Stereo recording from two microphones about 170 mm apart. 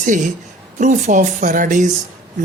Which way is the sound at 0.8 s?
45° right (ahead or behind).